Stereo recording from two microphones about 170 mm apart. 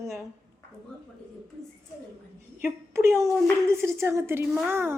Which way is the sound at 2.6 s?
15° right (ahead or behind).